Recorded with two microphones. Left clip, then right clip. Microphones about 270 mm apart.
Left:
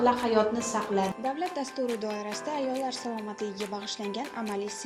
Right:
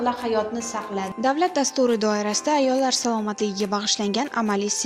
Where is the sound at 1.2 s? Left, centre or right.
Right.